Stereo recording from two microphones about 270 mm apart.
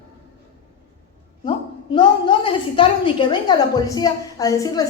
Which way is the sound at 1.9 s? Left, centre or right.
Centre.